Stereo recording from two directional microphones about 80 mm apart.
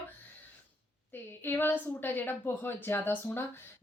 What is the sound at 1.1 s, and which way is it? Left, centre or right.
A woman's voice, left.